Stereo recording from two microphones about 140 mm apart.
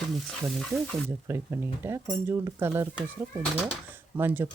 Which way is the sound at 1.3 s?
20° right (ahead or behind).